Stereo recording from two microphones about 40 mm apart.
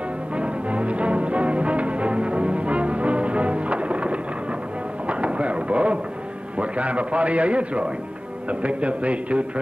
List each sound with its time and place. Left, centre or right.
0.4 s music: right
5.0 s a sound: right
6.6 s a man's voice: right